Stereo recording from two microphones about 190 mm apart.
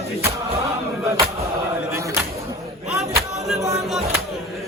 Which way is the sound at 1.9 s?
15° right (ahead or behind).